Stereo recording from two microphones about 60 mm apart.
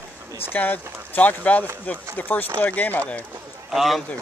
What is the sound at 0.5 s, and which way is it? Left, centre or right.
Speech, left.